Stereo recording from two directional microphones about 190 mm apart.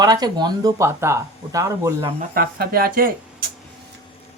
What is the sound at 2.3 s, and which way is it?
Speech, 50° right (ahead or behind).